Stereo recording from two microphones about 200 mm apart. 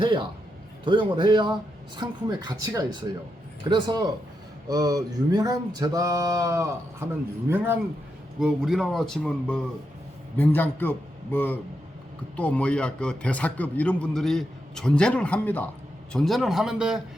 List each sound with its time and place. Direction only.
0.0 s speech: 25° right (ahead or behind)
4.7 s a sound: 20° right (ahead or behind)
8.4 s a man's voice: centre (ahead or behind)